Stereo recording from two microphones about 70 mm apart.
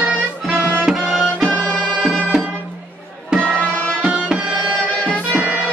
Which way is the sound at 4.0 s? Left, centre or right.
Centre.